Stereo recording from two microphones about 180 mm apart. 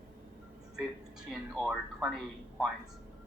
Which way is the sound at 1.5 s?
Centre (ahead or behind).